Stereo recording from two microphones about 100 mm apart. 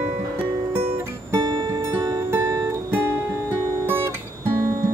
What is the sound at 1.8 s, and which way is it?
Music, 30° right (ahead or behind).